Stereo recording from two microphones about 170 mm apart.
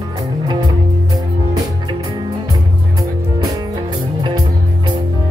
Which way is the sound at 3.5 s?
25° right (ahead or behind).